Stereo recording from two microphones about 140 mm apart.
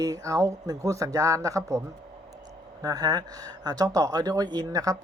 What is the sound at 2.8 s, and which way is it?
Speech, 25° right (ahead or behind).